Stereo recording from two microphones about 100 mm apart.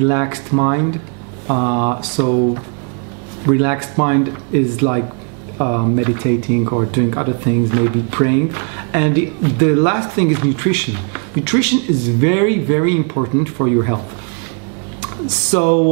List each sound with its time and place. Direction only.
0.0 s speech: 20° right (ahead or behind)
15.5 s speech: 15° right (ahead or behind)